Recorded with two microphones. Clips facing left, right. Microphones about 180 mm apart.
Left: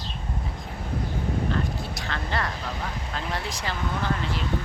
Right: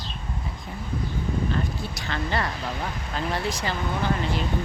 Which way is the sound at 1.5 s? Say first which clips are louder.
Even; centre (ahead or behind).